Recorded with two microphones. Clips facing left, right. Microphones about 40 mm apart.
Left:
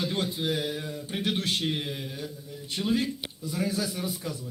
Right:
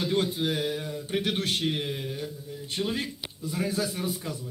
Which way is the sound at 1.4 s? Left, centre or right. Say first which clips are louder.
Even; right.